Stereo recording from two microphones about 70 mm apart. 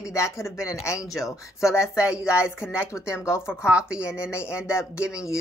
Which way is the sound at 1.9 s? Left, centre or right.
Left.